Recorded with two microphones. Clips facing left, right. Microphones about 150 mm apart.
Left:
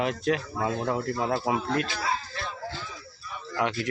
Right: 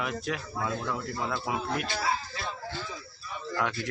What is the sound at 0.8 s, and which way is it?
Speech, 40° left (ahead or behind).